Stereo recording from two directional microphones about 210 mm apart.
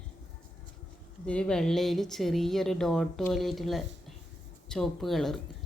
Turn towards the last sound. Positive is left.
turn(degrees=0)  # may be behind; listen again after turning